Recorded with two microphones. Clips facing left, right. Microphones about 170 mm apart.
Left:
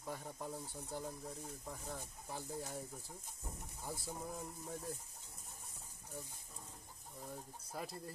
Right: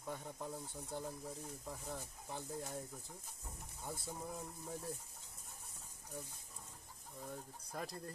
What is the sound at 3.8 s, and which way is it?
Speech, centre (ahead or behind).